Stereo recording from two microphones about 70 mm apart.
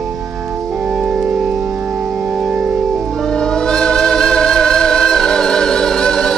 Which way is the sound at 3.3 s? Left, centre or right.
Centre.